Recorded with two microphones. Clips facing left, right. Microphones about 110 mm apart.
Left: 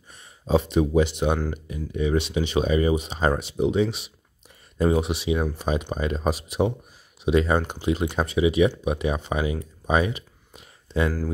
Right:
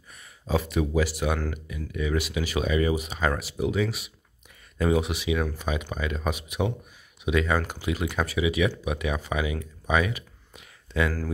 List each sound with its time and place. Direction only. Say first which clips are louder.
0.1 s speech: left 5 dB; 30° left (ahead or behind)